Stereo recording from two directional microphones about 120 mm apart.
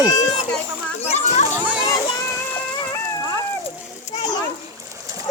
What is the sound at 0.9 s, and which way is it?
Children playing, 70° left (ahead or behind).